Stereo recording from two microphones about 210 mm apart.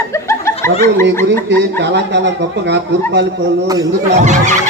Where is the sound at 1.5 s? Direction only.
55° right (ahead or behind).